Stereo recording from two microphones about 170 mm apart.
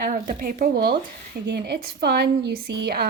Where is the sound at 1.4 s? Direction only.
80° right.